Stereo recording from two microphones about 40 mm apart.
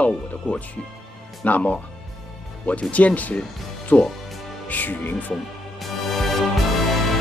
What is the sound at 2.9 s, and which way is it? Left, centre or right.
Speech, left.